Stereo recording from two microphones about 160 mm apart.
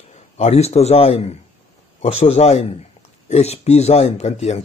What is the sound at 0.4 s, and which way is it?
Speech, 40° left (ahead or behind).